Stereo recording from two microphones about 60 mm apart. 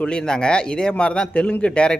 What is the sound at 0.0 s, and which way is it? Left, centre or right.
Speech, centre.